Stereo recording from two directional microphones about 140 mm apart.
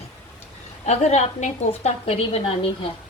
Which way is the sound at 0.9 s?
55° left (ahead or behind).